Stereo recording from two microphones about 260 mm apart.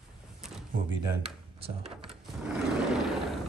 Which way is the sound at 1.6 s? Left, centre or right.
Right.